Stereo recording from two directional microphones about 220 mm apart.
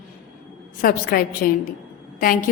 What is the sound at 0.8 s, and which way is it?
Speech, 40° left (ahead or behind).